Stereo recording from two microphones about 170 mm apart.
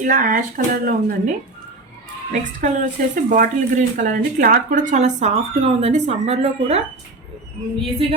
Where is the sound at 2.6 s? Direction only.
50° right (ahead or behind).